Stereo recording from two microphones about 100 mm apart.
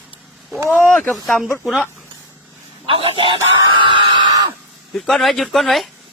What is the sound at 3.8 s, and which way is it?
Screaming, 50° right (ahead or behind).